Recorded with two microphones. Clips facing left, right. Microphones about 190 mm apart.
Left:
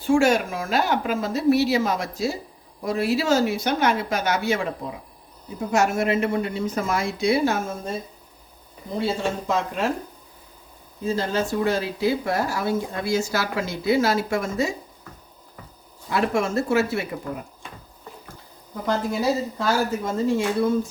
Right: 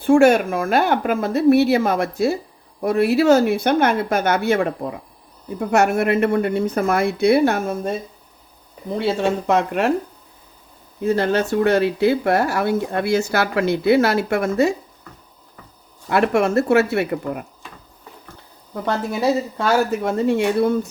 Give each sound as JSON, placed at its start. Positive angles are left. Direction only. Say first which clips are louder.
{"t": 0.0, "sound": "speech", "louder": "right 6 dB", "side_deg": -55}
{"t": 9.0, "sound": "speech", "louder": "right 5 dB", "side_deg": -65}
{"t": 11.0, "sound": "speech", "louder": "right 6 dB", "side_deg": -65}
{"t": 16.0, "sound": "speech", "louder": "right 5 dB", "side_deg": -65}
{"t": 18.9, "sound": "speech", "louder": "right 3 dB", "side_deg": -65}